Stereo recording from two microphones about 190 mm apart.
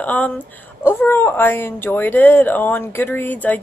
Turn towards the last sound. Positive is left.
turn(degrees=10)  # may be behind; listen again after turning